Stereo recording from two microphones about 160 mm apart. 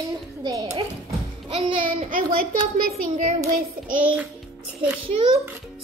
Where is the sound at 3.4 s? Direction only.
55° right (ahead or behind).